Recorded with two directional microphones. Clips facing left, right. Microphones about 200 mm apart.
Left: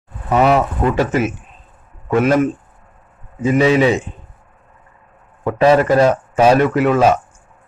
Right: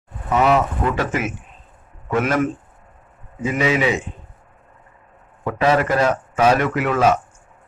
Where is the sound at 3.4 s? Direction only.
30° left (ahead or behind).